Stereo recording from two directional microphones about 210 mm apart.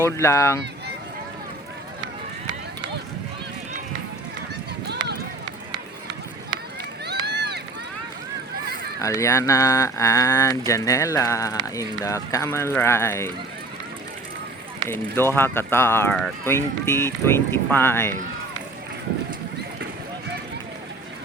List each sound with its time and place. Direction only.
0.0 s speech: 15° left (ahead or behind)
7.0 s run: 50° right (ahead or behind)
9.0 s speech: 15° left (ahead or behind)
14.8 s speech: 10° left (ahead or behind)